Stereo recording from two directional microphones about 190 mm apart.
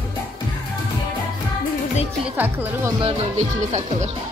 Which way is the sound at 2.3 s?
10° right (ahead or behind).